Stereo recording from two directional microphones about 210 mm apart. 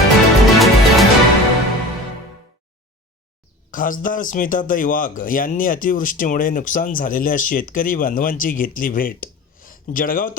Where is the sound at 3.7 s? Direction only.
40° left (ahead or behind).